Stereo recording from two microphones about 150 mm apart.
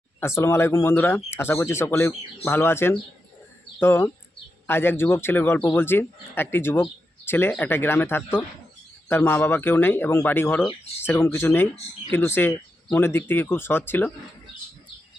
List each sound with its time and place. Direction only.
0.2 s speech: 15° left (ahead or behind)